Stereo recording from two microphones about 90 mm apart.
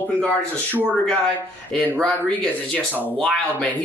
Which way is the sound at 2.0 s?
10° left (ahead or behind).